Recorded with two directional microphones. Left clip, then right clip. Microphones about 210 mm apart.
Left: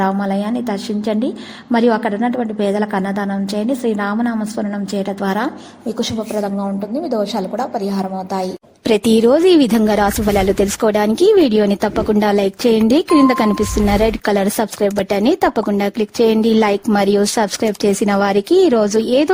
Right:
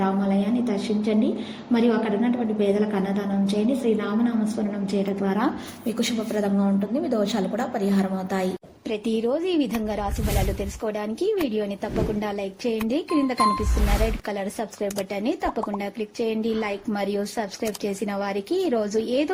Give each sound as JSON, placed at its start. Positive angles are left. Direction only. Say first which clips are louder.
{"t": 1.7, "sound": "a woman's voice", "louder": "left 7 dB", "side_deg": 35}
{"t": 7.9, "sound": "a woman's voice", "louder": "left 5 dB", "side_deg": 15}
{"t": 8.9, "sound": "speech", "louder": "left 13 dB", "side_deg": 55}